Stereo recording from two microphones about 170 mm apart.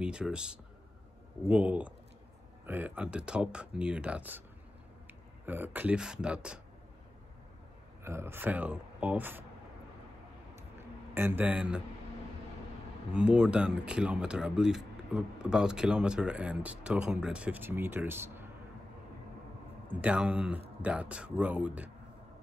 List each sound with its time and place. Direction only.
0.0 s speech: 5° right (ahead or behind)
8.0 s speech: 15° right (ahead or behind)
10.5 s a sound: 15° right (ahead or behind)
13.1 s speech: 5° right (ahead or behind)
19.9 s speech: 5° right (ahead or behind)